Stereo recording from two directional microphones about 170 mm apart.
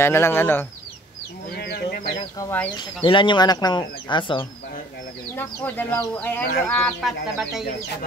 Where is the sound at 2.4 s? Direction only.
20° left (ahead or behind).